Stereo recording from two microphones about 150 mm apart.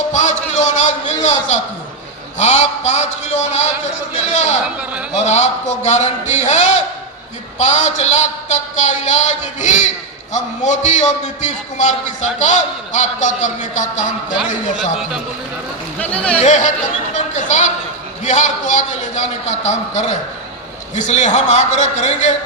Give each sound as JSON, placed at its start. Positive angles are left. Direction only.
{"t": 0.1, "sound": "a sound", "side_deg": 55}
{"t": 1.2, "sound": "a man's voice", "side_deg": 50}
{"t": 4.6, "sound": "a man's voice", "side_deg": -10}
{"t": 5.1, "sound": "a man's voice", "side_deg": 50}
{"t": 16.0, "sound": "speech", "side_deg": 10}
{"t": 16.4, "sound": "speech", "side_deg": 55}
{"t": 17.2, "sound": "music", "side_deg": 50}
{"t": 18.2, "sound": "a man's voice", "side_deg": 55}